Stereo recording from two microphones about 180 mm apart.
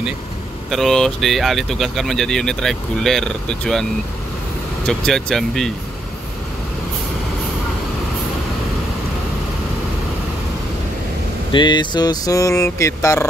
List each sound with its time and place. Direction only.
0.7 s speech: centre (ahead or behind)
4.8 s speech: centre (ahead or behind)
11.5 s a sound: 25° left (ahead or behind)